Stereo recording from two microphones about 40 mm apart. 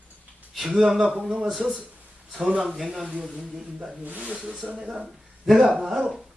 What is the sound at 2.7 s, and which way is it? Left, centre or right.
Speech, centre.